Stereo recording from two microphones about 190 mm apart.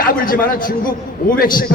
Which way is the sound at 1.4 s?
50° left (ahead or behind).